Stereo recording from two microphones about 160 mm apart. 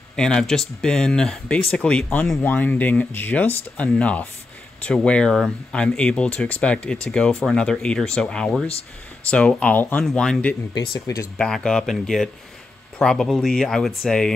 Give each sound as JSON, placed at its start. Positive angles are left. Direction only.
{"t": 0.1, "sound": "speech", "side_deg": 5}
{"t": 10.7, "sound": "speech", "side_deg": 25}
{"t": 11.3, "sound": "speech", "side_deg": 5}